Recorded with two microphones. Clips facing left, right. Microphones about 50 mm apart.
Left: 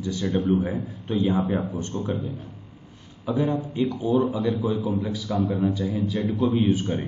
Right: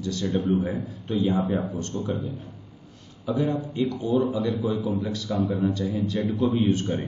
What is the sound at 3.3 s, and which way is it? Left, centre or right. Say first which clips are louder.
A man's voice: left 1 dB; centre.